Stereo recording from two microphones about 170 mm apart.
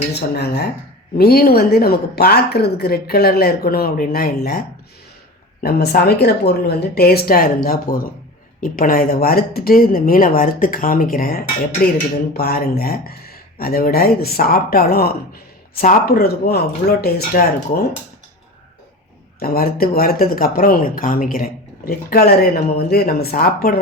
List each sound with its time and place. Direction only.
0.1 s speech: 75° left (ahead or behind)
1.2 s speech: 65° left (ahead or behind)
5.6 s speech: 65° left (ahead or behind)
19.4 s speech: 60° left (ahead or behind)